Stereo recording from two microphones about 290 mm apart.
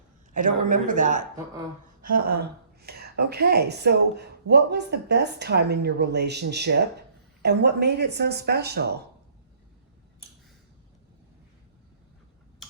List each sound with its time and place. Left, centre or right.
0.3 s speech: right
2.0 s a sound: right
2.4 s speech: right